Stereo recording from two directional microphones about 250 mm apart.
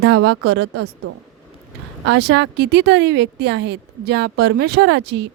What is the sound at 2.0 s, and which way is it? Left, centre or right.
Speech, right.